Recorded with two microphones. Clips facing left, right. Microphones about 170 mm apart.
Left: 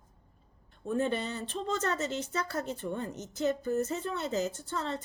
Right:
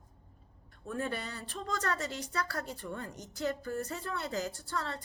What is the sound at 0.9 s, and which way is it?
A woman's voice, 25° left (ahead or behind).